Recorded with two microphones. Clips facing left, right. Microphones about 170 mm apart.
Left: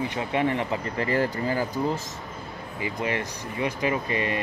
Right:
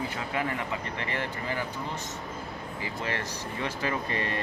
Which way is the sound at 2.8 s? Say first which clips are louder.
Left 6 dB; 15° left (ahead or behind).